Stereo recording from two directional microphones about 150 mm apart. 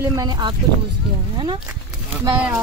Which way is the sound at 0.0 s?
25° right (ahead or behind).